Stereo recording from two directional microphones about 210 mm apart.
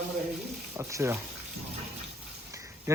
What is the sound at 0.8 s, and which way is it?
Speech, 15° right (ahead or behind).